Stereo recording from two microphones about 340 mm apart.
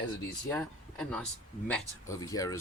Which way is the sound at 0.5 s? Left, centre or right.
Centre.